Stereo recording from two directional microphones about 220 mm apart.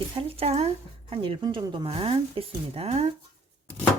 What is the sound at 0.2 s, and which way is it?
Speech, 25° right (ahead or behind).